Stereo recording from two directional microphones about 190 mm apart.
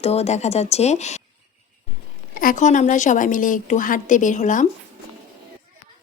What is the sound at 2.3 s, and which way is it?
A woman's voice, 45° left (ahead or behind).